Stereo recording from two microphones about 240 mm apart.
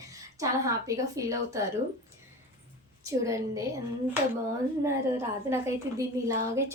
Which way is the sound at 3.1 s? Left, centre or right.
Centre.